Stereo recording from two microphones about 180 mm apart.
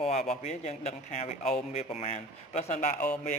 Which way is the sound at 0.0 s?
35° left (ahead or behind).